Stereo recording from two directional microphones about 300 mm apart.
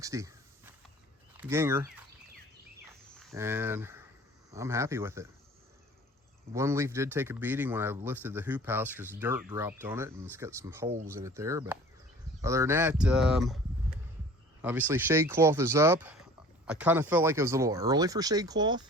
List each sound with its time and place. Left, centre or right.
0.0 s a sound: centre
1.4 s speech: centre
3.2 s speech: centre
6.5 s speech: centre
14.6 s speech: centre